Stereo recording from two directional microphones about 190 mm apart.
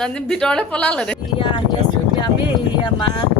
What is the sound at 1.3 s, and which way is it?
Speech, 25° left (ahead or behind).